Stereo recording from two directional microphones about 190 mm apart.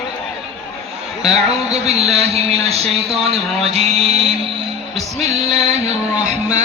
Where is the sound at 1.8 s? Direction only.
35° right (ahead or behind).